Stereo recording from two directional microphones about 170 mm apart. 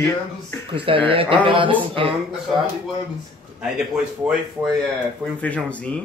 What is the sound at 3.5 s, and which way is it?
Speech, 5° right (ahead or behind).